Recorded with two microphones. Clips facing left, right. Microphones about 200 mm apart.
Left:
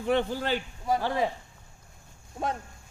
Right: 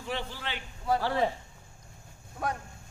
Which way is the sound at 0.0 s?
50° left (ahead or behind).